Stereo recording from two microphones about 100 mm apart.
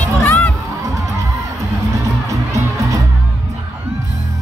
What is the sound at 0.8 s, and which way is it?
Music, 35° right (ahead or behind).